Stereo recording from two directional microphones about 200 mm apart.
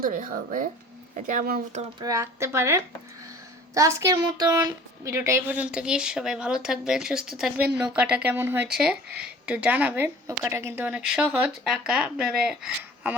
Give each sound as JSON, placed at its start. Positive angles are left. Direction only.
{"t": 0.1, "sound": "speech", "side_deg": -40}
{"t": 2.0, "sound": "a woman's voice", "side_deg": -15}